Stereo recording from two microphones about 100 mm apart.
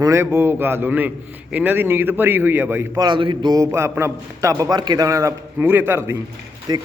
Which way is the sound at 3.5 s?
30° right (ahead or behind).